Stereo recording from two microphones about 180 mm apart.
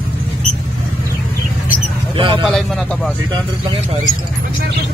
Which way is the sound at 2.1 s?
25° right (ahead or behind).